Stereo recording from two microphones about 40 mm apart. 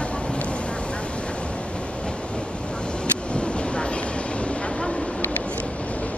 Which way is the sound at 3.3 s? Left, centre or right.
Left.